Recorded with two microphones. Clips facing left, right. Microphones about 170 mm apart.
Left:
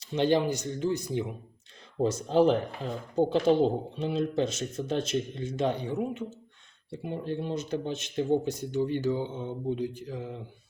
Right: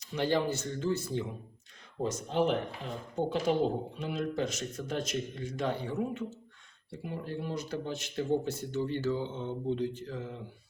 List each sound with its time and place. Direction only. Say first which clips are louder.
0.0 s speech: left 5 dB; 25° left (ahead or behind)
2.0 s speech: left 6 dB; 35° left (ahead or behind); by 10.3 s 15° left (ahead or behind)